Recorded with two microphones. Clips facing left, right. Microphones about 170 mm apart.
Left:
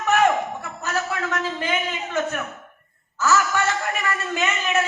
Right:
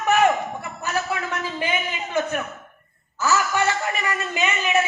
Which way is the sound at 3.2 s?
15° right (ahead or behind).